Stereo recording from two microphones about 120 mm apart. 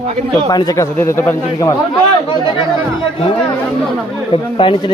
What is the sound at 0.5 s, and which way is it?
Speech, 30° left (ahead or behind).